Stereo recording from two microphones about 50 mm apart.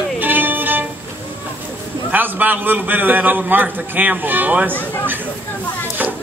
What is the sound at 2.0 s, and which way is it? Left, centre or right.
A man's voice, right.